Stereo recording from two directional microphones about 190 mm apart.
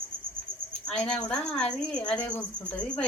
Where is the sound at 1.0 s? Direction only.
5° left (ahead or behind).